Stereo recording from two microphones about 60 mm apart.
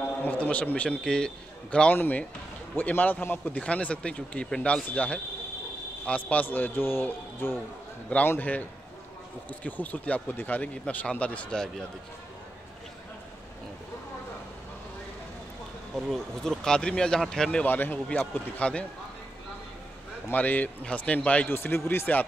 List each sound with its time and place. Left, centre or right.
0.2 s speech: left
1.0 s speech: centre
2.0 s a man's voice: left
3.5 s a man's voice: centre; by 7.5 s left
8.4 s speech: left
15.9 s speech: centre
17.6 s a man's voice: left
18.0 s speech: centre
20.2 s speech: left
21.5 s a man's voice: left